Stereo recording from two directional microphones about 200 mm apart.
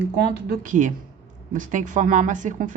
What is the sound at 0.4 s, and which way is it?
Speech, 45° right (ahead or behind).